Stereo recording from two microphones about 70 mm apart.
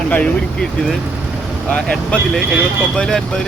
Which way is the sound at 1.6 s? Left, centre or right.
Centre.